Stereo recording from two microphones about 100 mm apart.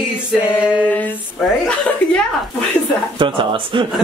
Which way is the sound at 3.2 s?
55° right (ahead or behind).